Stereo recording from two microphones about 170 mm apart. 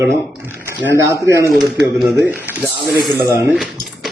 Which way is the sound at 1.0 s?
20° right (ahead or behind).